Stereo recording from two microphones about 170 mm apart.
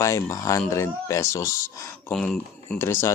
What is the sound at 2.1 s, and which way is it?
Speech, 5° left (ahead or behind).